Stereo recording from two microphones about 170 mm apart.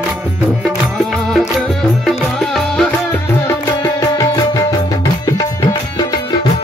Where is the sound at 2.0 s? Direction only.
5° left (ahead or behind).